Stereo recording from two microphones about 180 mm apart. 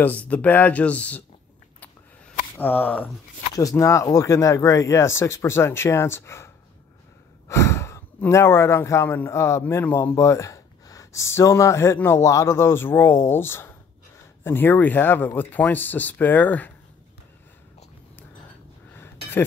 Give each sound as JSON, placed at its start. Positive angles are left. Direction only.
{"t": 0.0, "sound": "speech", "side_deg": 10}
{"t": 1.8, "sound": "a sound", "side_deg": 10}
{"t": 3.5, "sound": "speech", "side_deg": 15}